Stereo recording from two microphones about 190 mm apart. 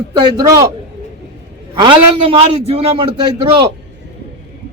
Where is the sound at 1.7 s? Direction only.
25° right (ahead or behind).